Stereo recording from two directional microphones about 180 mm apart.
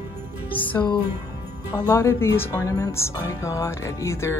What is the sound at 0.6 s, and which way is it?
Speech, 10° left (ahead or behind).